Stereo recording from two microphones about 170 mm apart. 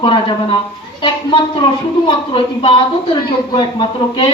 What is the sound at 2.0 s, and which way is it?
A woman's voice, 30° left (ahead or behind).